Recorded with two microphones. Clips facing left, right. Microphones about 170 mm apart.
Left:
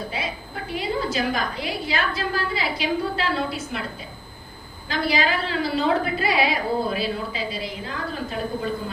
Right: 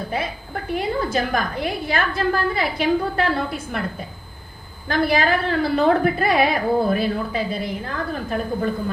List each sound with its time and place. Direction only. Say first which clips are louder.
0.1 s a woman's voice: right 4 dB; 50° right (ahead or behind)
4.9 s a woman's voice: right 4 dB; 55° right (ahead or behind)